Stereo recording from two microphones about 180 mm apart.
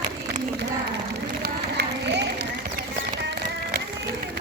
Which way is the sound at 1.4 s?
70° right (ahead or behind).